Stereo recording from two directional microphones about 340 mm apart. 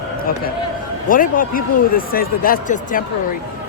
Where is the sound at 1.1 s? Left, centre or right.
Left.